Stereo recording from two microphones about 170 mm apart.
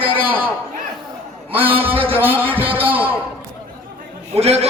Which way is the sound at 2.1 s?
10° right (ahead or behind).